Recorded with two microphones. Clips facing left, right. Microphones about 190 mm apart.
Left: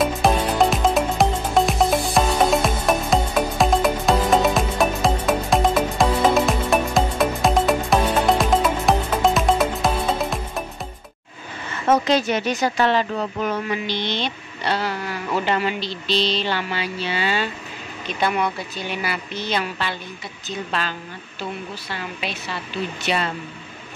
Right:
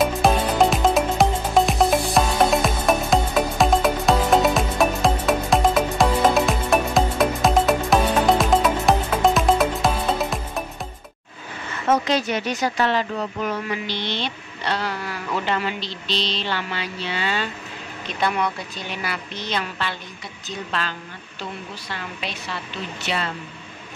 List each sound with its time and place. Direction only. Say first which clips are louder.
0.0 s music: even; centre (ahead or behind)
12.6 s speech: left 1 dB; 30° left (ahead or behind)
13.8 s speech: left 2 dB; 15° left (ahead or behind)
21.9 s a woman's voice: left 2 dB; 5° left (ahead or behind)